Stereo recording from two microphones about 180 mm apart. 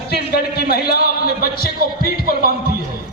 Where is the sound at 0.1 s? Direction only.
60° left (ahead or behind).